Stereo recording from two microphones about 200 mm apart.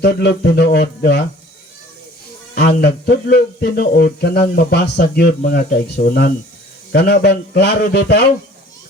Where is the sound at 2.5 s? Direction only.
55° left (ahead or behind).